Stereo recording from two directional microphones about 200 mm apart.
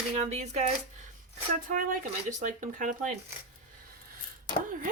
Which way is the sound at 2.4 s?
40° right (ahead or behind).